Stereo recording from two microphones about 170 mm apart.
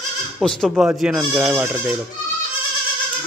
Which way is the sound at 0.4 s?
5° left (ahead or behind).